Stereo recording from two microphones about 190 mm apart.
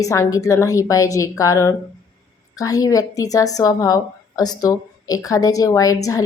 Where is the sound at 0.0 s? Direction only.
15° left (ahead or behind).